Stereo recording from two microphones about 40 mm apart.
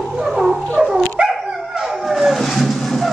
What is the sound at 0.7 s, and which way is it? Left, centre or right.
Dog, centre.